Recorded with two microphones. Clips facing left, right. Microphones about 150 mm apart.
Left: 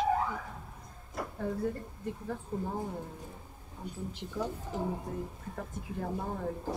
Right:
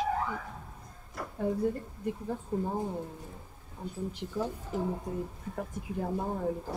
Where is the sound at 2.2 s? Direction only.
15° right (ahead or behind).